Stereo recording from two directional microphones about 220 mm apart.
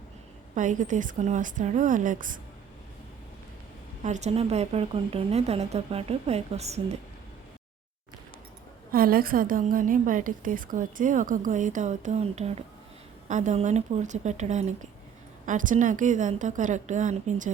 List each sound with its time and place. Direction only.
0.5 s a woman's voice: 35° right (ahead or behind)
4.0 s speech: 30° right (ahead or behind)
8.9 s a woman's voice: 40° right (ahead or behind)